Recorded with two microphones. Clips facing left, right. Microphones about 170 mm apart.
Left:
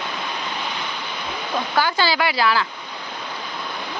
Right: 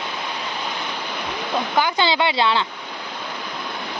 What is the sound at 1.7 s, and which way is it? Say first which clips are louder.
Speech: even; 20° right (ahead or behind).